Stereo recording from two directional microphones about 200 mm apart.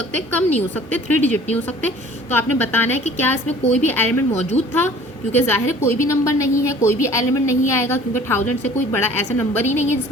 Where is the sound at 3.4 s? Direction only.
35° left (ahead or behind).